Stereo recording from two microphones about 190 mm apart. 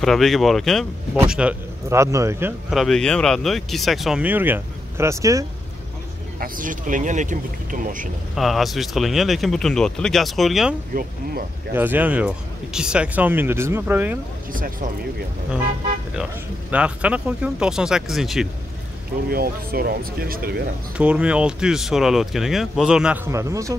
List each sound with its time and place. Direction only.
0.0 s speech: centre (ahead or behind); by 2.5 s 15° right (ahead or behind)
2.7 s speech: centre (ahead or behind); by 5.4 s 15° right (ahead or behind)
6.4 s speech: 45° right (ahead or behind)
8.4 s speech: centre (ahead or behind)
11.7 s speech: 10° right (ahead or behind)
14.5 s speech: 45° right (ahead or behind)
16.7 s speech: 5° right (ahead or behind)
19.2 s speech: 50° right (ahead or behind)
21.0 s speech: 5° right (ahead or behind)
23.3 s speech: 15° right (ahead or behind)